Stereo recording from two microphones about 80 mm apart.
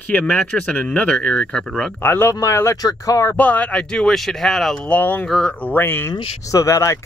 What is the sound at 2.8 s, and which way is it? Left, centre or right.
Speech, left.